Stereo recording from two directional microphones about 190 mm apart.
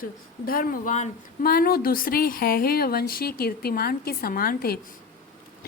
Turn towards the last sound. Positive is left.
turn(degrees=50)  # may be behind; listen again after turning